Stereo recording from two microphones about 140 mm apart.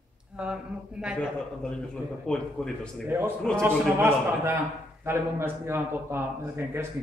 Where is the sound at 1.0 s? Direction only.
5° right (ahead or behind).